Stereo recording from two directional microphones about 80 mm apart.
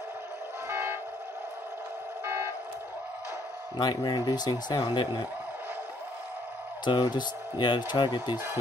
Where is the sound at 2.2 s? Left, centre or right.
Right.